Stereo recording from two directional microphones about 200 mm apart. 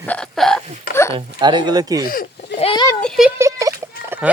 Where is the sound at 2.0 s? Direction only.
45° left (ahead or behind).